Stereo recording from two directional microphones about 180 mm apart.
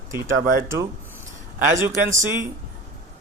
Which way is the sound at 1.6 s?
15° right (ahead or behind).